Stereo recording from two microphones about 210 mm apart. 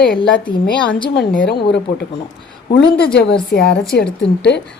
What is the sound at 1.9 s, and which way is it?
Speech, 45° left (ahead or behind).